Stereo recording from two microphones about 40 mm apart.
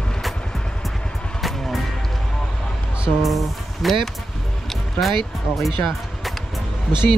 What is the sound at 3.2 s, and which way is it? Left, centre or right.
Speech, centre.